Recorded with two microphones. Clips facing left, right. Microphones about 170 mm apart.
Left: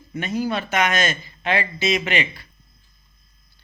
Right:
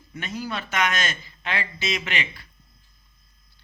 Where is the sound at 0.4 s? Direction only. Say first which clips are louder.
Left 3 dB; 50° left (ahead or behind).